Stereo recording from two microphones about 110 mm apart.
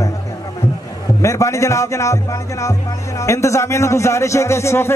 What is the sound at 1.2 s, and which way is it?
Speech, 30° left (ahead or behind).